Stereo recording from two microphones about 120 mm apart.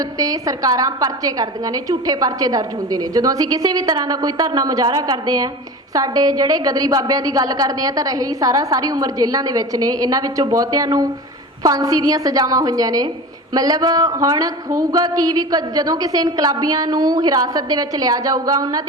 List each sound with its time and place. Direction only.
0.0 s a woman's voice: 30° right (ahead or behind)